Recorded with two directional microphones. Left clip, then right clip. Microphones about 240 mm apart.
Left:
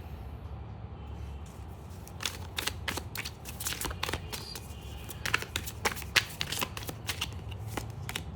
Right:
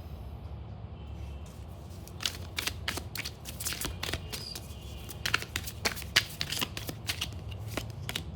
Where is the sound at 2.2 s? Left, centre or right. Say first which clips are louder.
Right 1 dB; centre.